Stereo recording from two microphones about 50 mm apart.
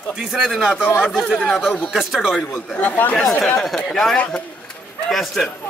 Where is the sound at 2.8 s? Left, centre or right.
Left.